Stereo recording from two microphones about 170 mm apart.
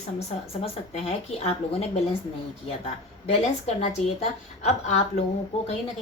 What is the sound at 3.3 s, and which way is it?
A woman's voice, 40° left (ahead or behind).